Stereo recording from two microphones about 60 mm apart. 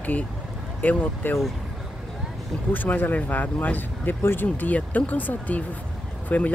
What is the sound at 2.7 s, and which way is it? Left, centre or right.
Speech, left.